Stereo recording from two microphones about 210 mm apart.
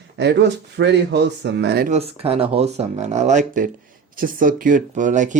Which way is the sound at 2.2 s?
25° right (ahead or behind).